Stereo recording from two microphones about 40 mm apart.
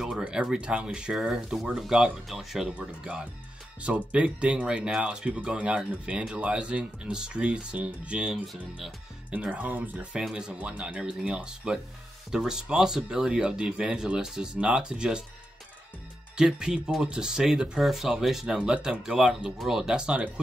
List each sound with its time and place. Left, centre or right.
0.4 s speech: right
1.6 s speech: centre
1.9 s speech: centre
2.2 s speech: centre
2.8 s speech: right
3.8 s speech: right
9.3 s speech: right
10.3 s speech: right
11.0 s speech: right
16.3 s speech: centre
17.7 s speech: centre
18.6 s speech: right
20.0 s speech: right